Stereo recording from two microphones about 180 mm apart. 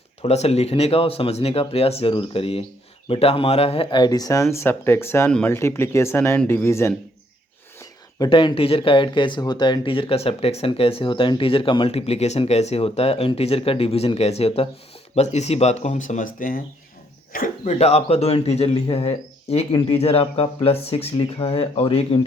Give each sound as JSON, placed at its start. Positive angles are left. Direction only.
{"t": 0.2, "sound": "speech", "side_deg": 35}